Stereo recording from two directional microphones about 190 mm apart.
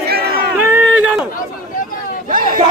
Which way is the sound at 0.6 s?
10° right (ahead or behind).